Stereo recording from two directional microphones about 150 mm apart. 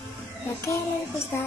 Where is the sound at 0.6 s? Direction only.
20° left (ahead or behind).